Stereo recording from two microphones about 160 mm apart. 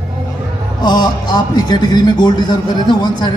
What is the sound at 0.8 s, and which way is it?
A man's voice, 25° left (ahead or behind).